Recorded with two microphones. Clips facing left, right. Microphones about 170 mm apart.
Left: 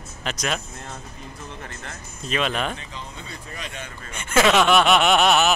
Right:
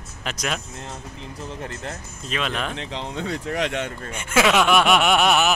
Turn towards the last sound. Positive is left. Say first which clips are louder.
# left 1 dB
turn(degrees=-10)  # may be behind; listen again after turning